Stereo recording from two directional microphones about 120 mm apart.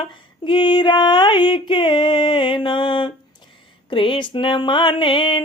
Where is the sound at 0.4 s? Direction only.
45° left (ahead or behind).